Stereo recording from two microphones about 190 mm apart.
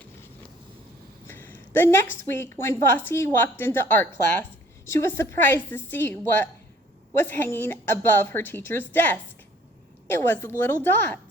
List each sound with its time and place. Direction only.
1.3 s a woman's voice: 10° left (ahead or behind)